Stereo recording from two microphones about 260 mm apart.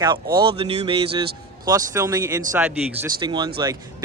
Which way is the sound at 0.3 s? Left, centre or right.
Centre.